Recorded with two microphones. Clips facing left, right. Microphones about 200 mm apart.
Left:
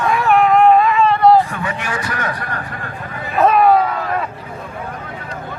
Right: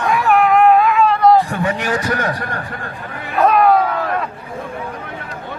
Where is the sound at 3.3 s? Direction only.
Centre (ahead or behind).